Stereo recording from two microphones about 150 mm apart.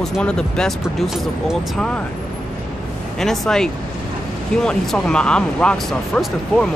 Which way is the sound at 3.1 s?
5° left (ahead or behind).